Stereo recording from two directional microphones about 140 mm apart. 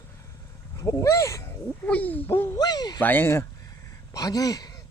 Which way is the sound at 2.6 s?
30° left (ahead or behind).